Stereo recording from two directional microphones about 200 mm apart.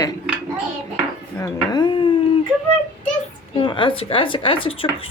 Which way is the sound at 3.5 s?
25° left (ahead or behind).